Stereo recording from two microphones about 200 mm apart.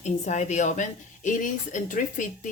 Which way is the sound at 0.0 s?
35° left (ahead or behind).